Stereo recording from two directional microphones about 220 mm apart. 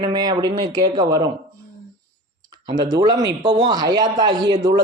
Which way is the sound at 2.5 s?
20° right (ahead or behind).